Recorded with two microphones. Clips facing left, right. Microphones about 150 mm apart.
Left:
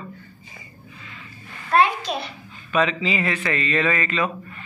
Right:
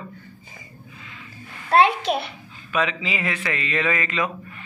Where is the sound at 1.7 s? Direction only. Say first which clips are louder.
Right 2 dB; 65° right (ahead or behind).